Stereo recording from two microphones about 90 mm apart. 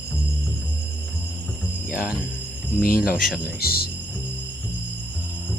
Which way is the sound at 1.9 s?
15° right (ahead or behind).